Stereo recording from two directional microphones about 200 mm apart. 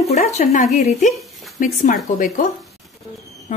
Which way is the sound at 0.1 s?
35° left (ahead or behind).